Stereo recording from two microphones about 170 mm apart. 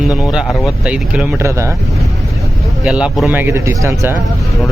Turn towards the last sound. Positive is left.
turn(degrees=-15)  # may be behind; listen again after turning